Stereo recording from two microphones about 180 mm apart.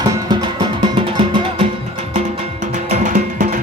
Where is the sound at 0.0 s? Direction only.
25° right (ahead or behind).